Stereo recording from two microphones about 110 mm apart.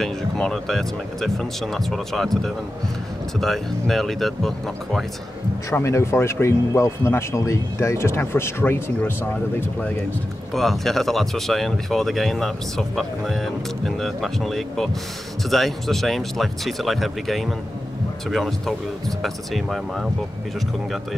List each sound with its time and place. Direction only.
0.0 s speech: 5° left (ahead or behind)
5.7 s speech: 25° left (ahead or behind)
10.5 s speech: centre (ahead or behind)